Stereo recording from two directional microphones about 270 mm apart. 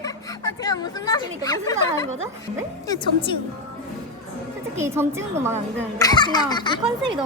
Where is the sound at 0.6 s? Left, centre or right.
Centre.